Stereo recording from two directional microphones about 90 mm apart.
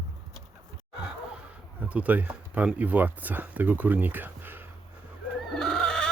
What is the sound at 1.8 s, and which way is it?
Speech, 15° right (ahead or behind).